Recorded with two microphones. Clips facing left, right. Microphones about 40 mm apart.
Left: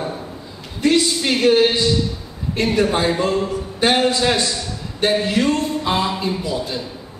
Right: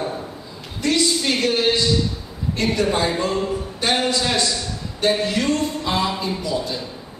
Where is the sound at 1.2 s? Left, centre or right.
Centre.